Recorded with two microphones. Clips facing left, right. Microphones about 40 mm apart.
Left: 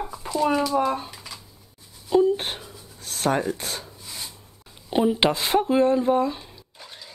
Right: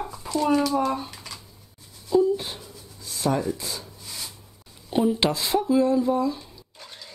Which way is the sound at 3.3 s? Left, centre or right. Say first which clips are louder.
Left 1 dB; left.